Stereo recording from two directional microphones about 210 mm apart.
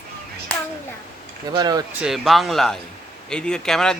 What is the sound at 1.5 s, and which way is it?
Speech, 20° right (ahead or behind).